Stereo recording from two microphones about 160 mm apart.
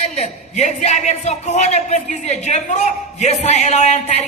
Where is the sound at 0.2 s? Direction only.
45° left (ahead or behind).